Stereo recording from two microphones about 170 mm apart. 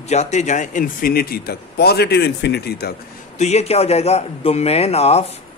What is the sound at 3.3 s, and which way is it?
A man's voice, 40° left (ahead or behind).